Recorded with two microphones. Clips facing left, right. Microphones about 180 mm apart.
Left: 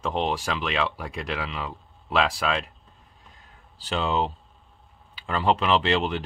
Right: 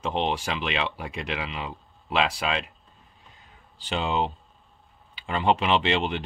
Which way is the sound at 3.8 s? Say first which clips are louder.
Left 1 dB; centre (ahead or behind).